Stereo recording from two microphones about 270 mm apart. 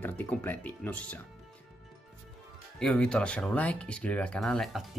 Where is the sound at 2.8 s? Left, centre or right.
Centre.